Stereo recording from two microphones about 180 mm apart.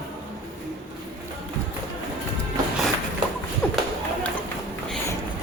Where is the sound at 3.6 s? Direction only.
5° left (ahead or behind).